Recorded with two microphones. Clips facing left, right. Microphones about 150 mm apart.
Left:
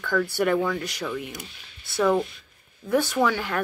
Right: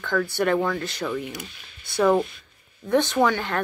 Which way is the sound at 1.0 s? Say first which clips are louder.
Right 3 dB; centre (ahead or behind).